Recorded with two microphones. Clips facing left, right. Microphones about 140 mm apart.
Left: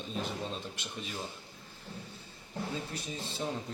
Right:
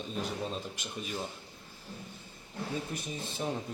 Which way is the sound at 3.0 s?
15° right (ahead or behind).